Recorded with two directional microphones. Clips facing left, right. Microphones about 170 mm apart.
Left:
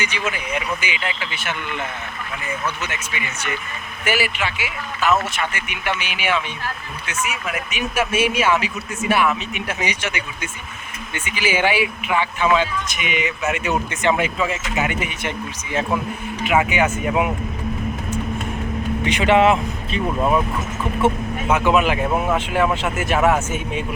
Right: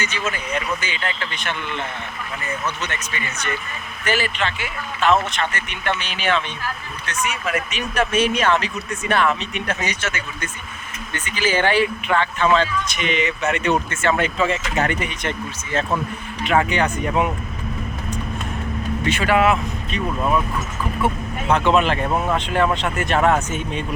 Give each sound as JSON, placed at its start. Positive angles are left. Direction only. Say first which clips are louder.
{"t": 0.0, "sound": "speech", "louder": "left 1 dB", "side_deg": 10}
{"t": 14.3, "sound": "speech", "louder": "right 2 dB", "side_deg": 5}
{"t": 19.0, "sound": "speech", "louder": "left 2 dB", "side_deg": 20}
{"t": 21.5, "sound": "speech", "louder": "even", "side_deg": 10}